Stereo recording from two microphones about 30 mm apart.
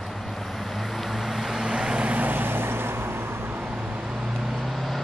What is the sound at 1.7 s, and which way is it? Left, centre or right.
Vehicle, right.